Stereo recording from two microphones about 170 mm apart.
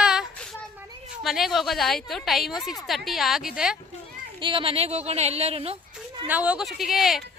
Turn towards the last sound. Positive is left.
turn(degrees=0)  # may be behind; listen again after turning